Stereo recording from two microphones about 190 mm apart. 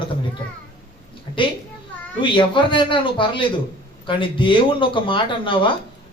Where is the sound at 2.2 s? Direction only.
25° left (ahead or behind).